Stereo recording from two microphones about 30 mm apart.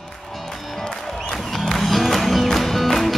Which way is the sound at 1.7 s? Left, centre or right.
Centre.